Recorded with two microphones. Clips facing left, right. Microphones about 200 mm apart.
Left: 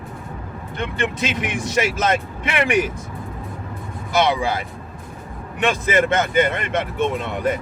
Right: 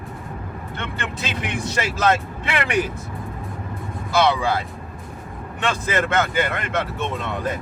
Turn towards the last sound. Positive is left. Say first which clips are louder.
# left 4 dB
turn(degrees=15)  # may be behind; listen again after turning